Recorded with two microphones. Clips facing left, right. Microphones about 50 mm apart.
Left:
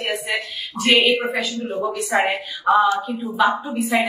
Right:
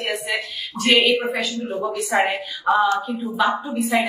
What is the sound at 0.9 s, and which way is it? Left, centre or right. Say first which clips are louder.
Speech: even; left.